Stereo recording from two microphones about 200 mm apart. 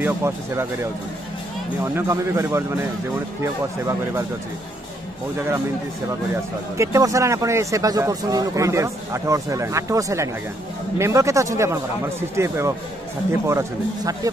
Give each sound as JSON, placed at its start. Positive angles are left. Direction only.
{"t": 0.0, "sound": "speech", "side_deg": -15}
{"t": 2.0, "sound": "speech", "side_deg": -15}
{"t": 6.0, "sound": "speech", "side_deg": -15}